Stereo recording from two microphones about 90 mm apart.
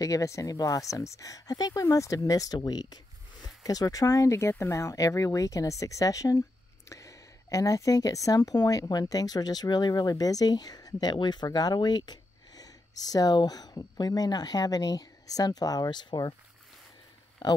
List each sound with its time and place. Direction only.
0.0 s a woman's voice: 40° left (ahead or behind)
17.4 s speech: 55° left (ahead or behind)